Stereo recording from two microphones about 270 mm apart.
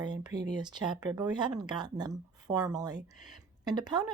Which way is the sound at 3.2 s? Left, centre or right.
Centre.